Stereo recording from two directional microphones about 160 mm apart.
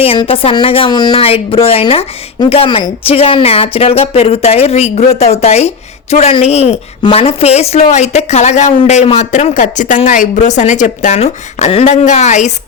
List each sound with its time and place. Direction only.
0.0 s speech: 35° left (ahead or behind)